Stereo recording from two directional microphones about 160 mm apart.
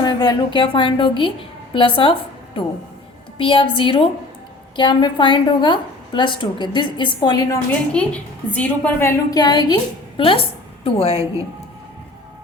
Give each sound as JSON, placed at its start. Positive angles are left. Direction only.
{"t": 0.0, "sound": "a woman's voice", "side_deg": 25}
{"t": 3.3, "sound": "a woman's voice", "side_deg": 30}
{"t": 8.0, "sound": "a woman's voice", "side_deg": 5}